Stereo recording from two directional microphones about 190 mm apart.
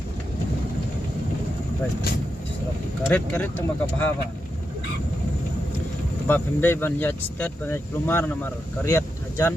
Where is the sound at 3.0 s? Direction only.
10° left (ahead or behind).